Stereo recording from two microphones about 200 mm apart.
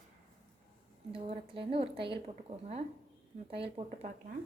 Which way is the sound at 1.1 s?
25° right (ahead or behind).